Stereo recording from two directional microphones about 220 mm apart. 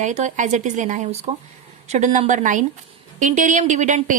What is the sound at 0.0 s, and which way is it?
A woman's voice, 30° right (ahead or behind).